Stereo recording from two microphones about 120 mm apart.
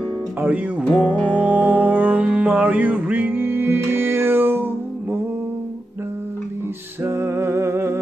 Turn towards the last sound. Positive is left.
turn(degrees=-20)  # may be behind; listen again after turning